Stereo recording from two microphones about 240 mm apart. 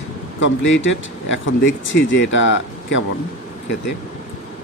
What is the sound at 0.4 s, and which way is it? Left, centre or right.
Speech, left.